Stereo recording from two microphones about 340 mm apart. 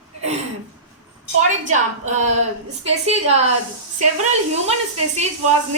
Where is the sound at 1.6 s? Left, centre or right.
Right.